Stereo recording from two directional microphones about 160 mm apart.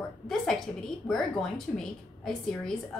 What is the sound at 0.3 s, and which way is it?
Speech, 5° left (ahead or behind).